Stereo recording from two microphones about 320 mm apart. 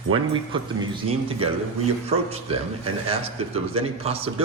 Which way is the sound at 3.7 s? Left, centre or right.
Centre.